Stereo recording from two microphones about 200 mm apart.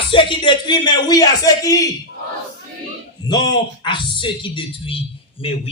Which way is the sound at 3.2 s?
20° left (ahead or behind).